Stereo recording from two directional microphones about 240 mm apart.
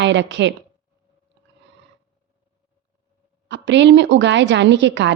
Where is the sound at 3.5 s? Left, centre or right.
Right.